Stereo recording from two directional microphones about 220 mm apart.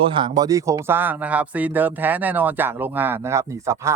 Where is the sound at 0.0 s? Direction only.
25° right (ahead or behind).